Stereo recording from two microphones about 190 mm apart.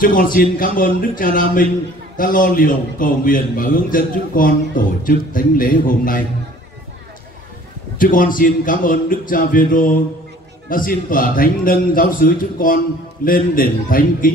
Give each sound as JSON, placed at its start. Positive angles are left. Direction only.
{"t": 0.0, "sound": "a man's voice", "side_deg": 45}
{"t": 8.0, "sound": "a man's voice", "side_deg": 45}